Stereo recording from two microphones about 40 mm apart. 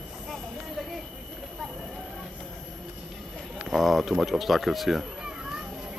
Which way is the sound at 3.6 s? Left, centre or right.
Centre.